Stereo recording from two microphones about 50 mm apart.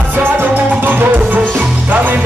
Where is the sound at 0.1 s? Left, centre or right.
Right.